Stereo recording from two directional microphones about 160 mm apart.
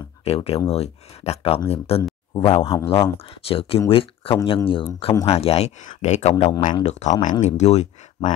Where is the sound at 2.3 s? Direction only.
25° left (ahead or behind).